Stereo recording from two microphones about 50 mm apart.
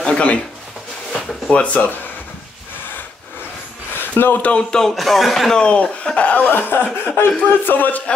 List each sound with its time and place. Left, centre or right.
0.0 s a sound: left
1.5 s speech: left
4.0 s speech: left
4.5 s speech: centre
4.9 s speech: centre
5.5 s speech: left
6.5 s speech: left